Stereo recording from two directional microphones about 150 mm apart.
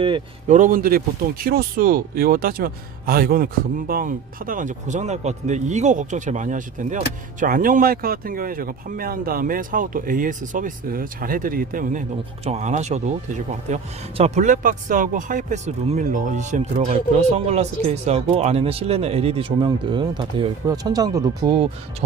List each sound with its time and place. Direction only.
0.4 s speech: 55° right (ahead or behind)
12.5 s speech: 50° right (ahead or behind); by 21.5 s 25° right (ahead or behind)